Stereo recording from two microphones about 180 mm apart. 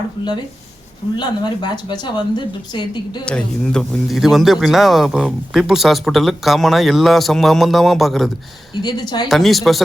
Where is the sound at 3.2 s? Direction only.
5° left (ahead or behind).